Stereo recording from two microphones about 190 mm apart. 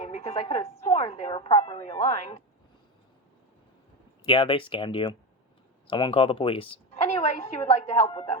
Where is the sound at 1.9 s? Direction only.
20° left (ahead or behind).